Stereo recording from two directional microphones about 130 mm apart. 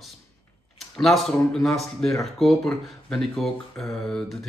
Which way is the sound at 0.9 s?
Centre (ahead or behind).